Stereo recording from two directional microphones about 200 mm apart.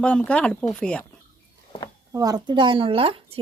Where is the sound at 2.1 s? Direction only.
20° right (ahead or behind).